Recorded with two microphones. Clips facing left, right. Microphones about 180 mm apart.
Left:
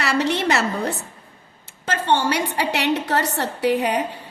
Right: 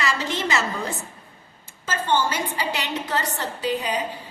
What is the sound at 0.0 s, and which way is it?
A woman's voice, 65° left (ahead or behind).